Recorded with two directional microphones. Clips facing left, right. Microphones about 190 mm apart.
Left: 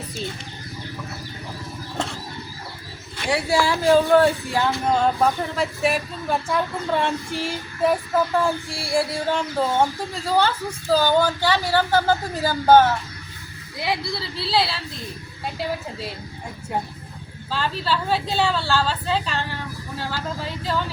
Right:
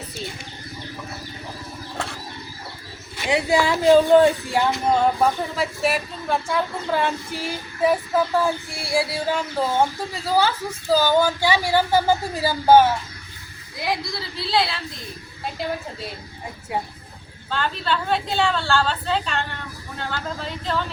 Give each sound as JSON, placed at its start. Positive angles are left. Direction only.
{"t": 3.2, "sound": "speech", "side_deg": -20}
{"t": 13.8, "sound": "speech", "side_deg": 0}
{"t": 17.5, "sound": "speech", "side_deg": 5}